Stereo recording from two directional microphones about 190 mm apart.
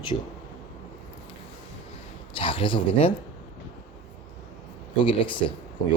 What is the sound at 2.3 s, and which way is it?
Speech, 30° left (ahead or behind).